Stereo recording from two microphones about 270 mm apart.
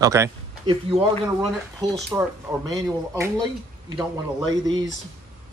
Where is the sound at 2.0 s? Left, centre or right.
Centre.